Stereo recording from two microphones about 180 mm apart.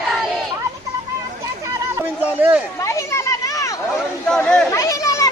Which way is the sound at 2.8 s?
15° left (ahead or behind).